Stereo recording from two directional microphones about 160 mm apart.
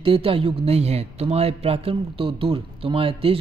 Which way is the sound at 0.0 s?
35° right (ahead or behind).